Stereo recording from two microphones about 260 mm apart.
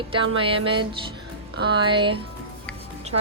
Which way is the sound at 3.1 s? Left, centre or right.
Right.